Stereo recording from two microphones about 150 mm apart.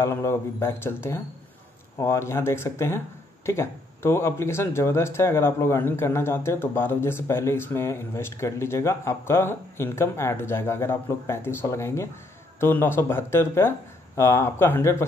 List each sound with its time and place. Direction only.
0.0 s speech: 15° left (ahead or behind)